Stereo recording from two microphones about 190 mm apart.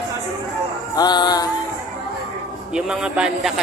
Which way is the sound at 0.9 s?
20° left (ahead or behind).